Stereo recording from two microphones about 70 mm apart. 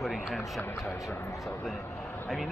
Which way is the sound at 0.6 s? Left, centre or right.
Left.